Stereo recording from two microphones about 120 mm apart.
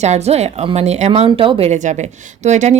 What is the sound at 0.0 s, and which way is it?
A woman's voice, 65° right (ahead or behind).